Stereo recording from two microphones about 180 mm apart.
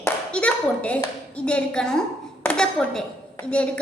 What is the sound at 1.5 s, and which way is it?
A woman's voice, 5° left (ahead or behind).